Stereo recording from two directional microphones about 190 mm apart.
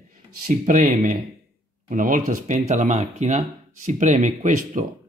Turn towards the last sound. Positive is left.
turn(degrees=-40)  # may be behind; listen again after turning